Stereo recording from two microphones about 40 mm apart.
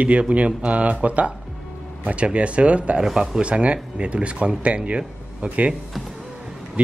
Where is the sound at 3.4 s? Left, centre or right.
Right.